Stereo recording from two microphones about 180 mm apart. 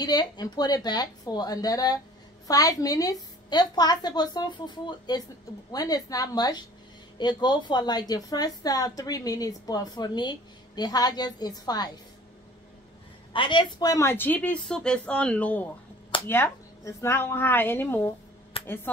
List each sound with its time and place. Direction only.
0.0 s a woman's voice: 20° left (ahead or behind)
13.3 s speech: 25° left (ahead or behind)
18.6 s a sound: 30° left (ahead or behind)